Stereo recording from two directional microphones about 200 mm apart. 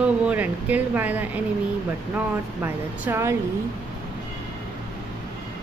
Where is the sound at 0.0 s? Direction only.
5° right (ahead or behind).